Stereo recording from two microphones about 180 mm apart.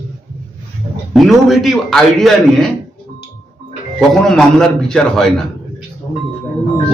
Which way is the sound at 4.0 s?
5° left (ahead or behind).